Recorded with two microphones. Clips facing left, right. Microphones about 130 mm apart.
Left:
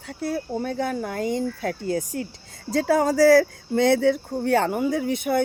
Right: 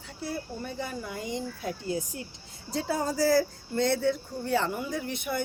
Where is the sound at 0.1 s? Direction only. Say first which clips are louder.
Left 8 dB; 60° left (ahead or behind).